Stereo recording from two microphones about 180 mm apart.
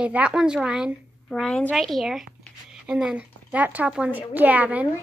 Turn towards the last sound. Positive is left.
turn(degrees=-10)  # may be behind; listen again after turning